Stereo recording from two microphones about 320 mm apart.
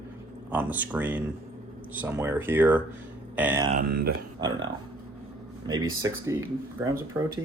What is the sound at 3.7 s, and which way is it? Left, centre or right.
Speech, right.